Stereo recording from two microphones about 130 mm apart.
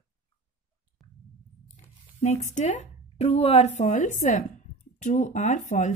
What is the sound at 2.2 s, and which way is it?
Speech, 65° left (ahead or behind).